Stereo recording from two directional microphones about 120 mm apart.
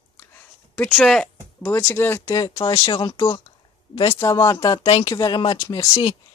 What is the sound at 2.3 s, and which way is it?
Speech, 30° left (ahead or behind).